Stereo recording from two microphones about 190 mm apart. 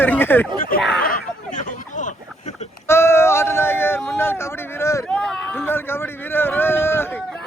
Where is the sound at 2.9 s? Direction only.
15° left (ahead or behind).